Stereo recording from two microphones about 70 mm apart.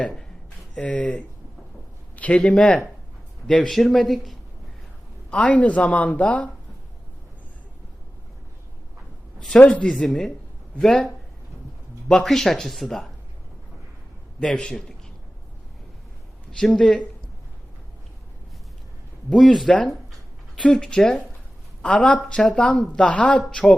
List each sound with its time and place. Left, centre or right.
0.8 s a woman's voice: centre
5.3 s a woman's voice: centre
9.5 s a woman's voice: centre
9.9 s a woman's voice: centre
14.3 s a woman's voice: centre
16.5 s a woman's voice: centre
19.3 s a woman's voice: centre